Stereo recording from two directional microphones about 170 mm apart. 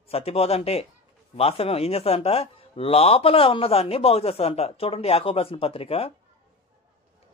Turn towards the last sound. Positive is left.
turn(degrees=35)  # may be behind; listen again after turning